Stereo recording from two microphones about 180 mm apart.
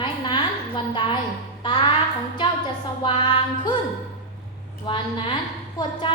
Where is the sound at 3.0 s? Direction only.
30° left (ahead or behind).